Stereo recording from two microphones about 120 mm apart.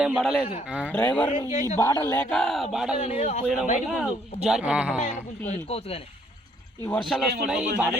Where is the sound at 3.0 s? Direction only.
60° left (ahead or behind).